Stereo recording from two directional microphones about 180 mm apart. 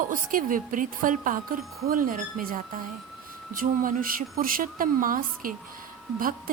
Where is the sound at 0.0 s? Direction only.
50° right (ahead or behind).